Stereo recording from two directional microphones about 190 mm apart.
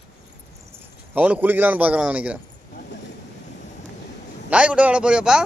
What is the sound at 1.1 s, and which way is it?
A man's voice, 10° right (ahead or behind).